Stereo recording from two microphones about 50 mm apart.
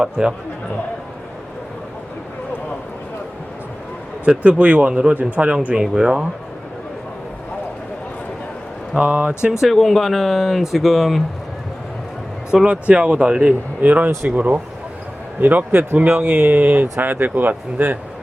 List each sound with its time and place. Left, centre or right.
0.0 s speech: centre
4.3 s speech: right
5.6 s speech: centre
9.0 s speech: right
9.5 s speech: centre
12.5 s speech: centre
12.9 s speech: right